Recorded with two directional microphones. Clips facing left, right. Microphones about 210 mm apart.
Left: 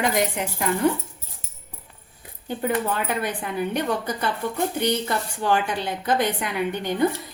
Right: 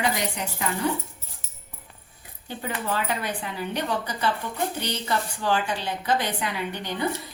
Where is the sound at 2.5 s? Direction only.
50° left (ahead or behind).